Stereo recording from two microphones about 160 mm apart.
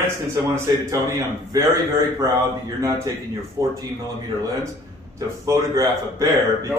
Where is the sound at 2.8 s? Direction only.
20° right (ahead or behind).